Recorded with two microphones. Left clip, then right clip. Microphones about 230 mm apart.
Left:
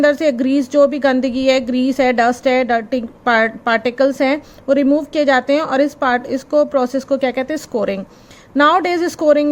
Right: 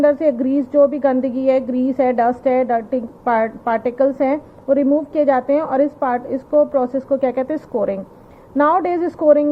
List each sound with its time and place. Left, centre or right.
0.0 s a woman's voice: left